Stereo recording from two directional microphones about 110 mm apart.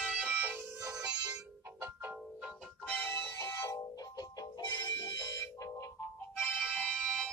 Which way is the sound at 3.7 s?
35° left (ahead or behind).